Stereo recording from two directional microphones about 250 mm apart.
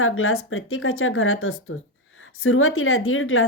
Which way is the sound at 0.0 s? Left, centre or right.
Left.